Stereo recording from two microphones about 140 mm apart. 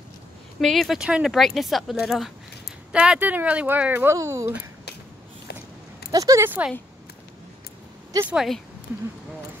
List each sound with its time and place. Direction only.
0.6 s speech: centre (ahead or behind); by 4.6 s 20° right (ahead or behind)
6.1 s speech: 20° right (ahead or behind)
8.3 s speech: 5° right (ahead or behind)